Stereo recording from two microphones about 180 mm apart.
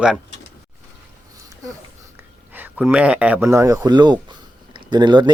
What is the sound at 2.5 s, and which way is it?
Speech, 10° right (ahead or behind).